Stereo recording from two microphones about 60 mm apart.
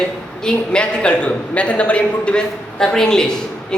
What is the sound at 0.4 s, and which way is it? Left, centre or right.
A man's voice, centre.